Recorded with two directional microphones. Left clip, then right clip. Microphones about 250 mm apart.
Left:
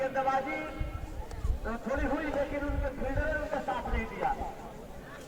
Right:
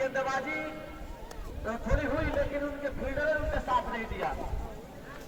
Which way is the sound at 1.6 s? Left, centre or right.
Right.